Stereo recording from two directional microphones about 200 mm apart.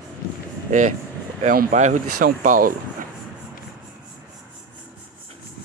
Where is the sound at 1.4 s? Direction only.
40° right (ahead or behind).